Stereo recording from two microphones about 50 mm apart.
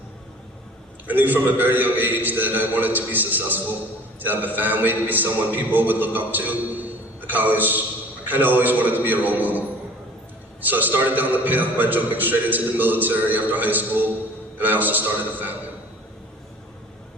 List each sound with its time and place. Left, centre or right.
1.0 s a man's voice: right
10.7 s a man's voice: right